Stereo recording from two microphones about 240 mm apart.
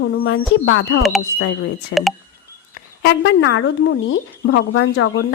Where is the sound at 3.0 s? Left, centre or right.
Left.